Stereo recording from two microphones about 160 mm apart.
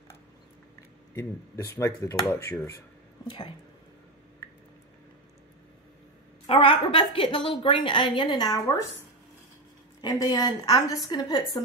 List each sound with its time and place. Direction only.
1.1 s a woman's voice: 20° left (ahead or behind)
3.3 s a woman's voice: 30° left (ahead or behind)
6.4 s a woman's voice: 35° left (ahead or behind)
10.0 s a woman's voice: 25° left (ahead or behind)